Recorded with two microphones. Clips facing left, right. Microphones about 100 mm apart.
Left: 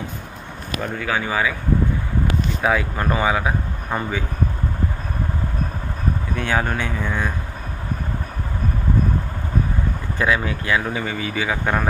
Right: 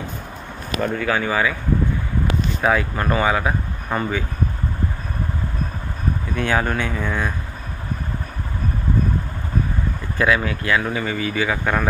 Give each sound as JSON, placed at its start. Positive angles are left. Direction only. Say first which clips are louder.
{"t": 0.7, "sound": "speech", "louder": "right 3 dB", "side_deg": 5}
{"t": 2.6, "sound": "speech", "louder": "right 1 dB", "side_deg": 10}
{"t": 6.3, "sound": "speech", "louder": "right 2 dB", "side_deg": 15}
{"t": 10.1, "sound": "speech", "louder": "right 2 dB", "side_deg": 20}